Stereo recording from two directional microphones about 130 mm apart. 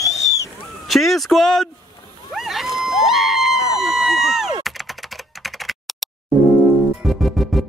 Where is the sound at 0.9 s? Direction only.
Centre (ahead or behind).